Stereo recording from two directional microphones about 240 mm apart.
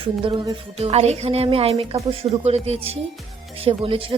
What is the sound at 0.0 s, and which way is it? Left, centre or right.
Speech, right.